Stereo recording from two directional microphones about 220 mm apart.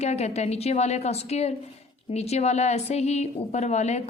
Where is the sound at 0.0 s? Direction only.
30° left (ahead or behind).